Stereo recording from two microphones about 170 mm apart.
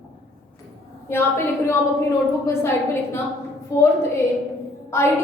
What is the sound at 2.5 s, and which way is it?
Speech, 15° left (ahead or behind).